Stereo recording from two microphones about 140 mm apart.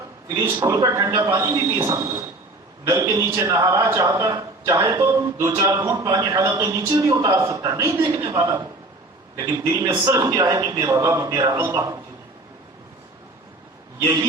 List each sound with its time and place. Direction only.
0.3 s a man's voice: 20° right (ahead or behind)
14.0 s a man's voice: 30° right (ahead or behind)